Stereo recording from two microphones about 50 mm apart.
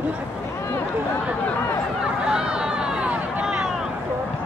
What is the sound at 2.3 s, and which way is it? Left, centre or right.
Vehicle, centre.